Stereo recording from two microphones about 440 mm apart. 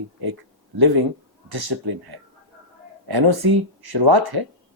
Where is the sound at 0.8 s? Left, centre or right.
Right.